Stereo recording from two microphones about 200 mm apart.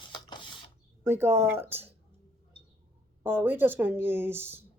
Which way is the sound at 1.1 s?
10° right (ahead or behind).